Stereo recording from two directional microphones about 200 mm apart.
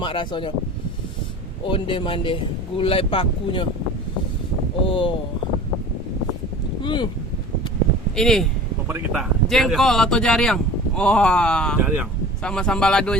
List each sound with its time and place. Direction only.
0.0 s speech: 25° left (ahead or behind)
1.6 s speech: 25° left (ahead or behind)
4.9 s speech: 25° left (ahead or behind)
6.8 s speech: 20° left (ahead or behind)
8.1 s speech: centre (ahead or behind)
11.8 s speech: 10° right (ahead or behind)
12.4 s speech: 5° left (ahead or behind)